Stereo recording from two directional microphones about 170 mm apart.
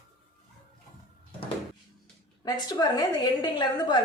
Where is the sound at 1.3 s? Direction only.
30° left (ahead or behind).